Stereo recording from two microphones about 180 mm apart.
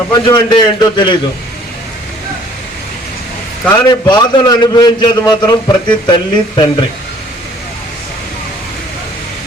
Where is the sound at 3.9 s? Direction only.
25° left (ahead or behind).